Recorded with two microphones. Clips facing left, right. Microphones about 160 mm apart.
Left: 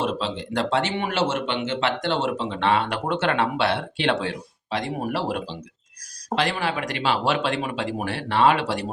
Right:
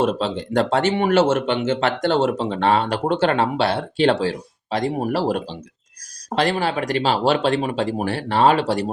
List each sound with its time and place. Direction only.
0.0 s speech: 45° right (ahead or behind)